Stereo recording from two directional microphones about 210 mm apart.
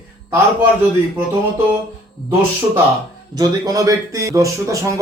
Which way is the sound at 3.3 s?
20° right (ahead or behind).